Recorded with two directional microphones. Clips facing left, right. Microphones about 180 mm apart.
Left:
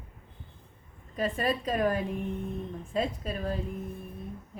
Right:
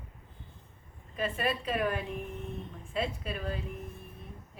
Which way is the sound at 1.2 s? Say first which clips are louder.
Left 3 dB; 40° left (ahead or behind).